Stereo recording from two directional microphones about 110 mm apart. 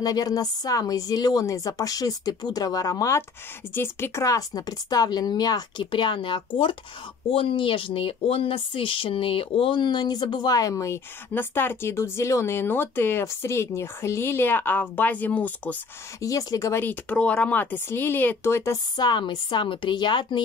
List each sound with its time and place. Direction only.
0.0 s speech: 35° left (ahead or behind)
3.7 s speech: 20° left (ahead or behind)
16.2 s speech: 30° left (ahead or behind)
16.8 s speech: 15° left (ahead or behind)
18.9 s a woman's voice: 45° left (ahead or behind)